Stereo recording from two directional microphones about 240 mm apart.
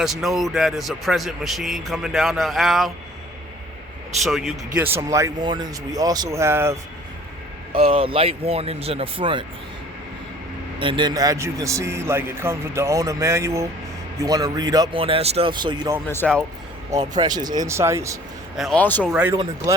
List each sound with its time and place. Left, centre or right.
0.0 s speech: centre
4.2 s a man's voice: centre
7.7 s speech: right
10.8 s a man's voice: centre
16.0 s speech: centre
17.2 s a man's voice: centre
18.5 s speech: centre
19.1 s a man's voice: centre